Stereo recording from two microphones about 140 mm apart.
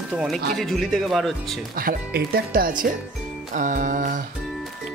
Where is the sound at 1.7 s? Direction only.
90° right.